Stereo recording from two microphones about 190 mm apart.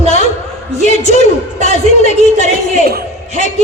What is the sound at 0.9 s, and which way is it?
A woman's voice, 35° left (ahead or behind).